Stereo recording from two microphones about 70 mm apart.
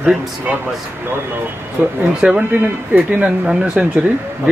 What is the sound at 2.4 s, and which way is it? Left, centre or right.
A man's voice, right.